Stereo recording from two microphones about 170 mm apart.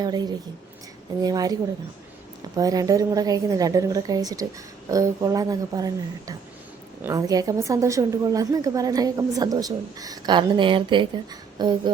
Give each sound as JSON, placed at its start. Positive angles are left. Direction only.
{"t": 0.0, "sound": "a woman's voice", "side_deg": -25}
{"t": 2.6, "sound": "a woman's voice", "side_deg": -20}